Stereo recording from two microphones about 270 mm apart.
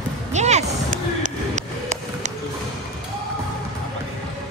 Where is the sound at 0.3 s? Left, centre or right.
Right.